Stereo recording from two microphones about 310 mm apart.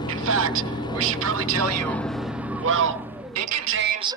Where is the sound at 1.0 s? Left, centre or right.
Right.